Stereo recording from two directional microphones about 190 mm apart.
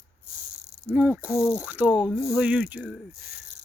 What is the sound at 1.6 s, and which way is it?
Mechanisms, 10° right (ahead or behind).